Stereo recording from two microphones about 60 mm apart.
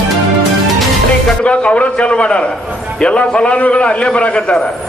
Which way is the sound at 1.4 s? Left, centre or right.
Centre.